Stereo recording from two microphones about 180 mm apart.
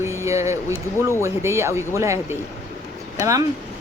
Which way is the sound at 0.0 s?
15° right (ahead or behind).